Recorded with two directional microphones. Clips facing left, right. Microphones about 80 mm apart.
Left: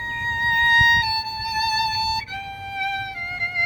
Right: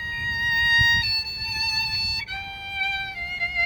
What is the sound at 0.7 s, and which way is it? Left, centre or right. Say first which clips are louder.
Music: left 6 dB; left.